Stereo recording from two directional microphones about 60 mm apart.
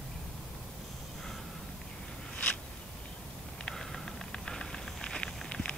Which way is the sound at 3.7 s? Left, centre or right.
Centre.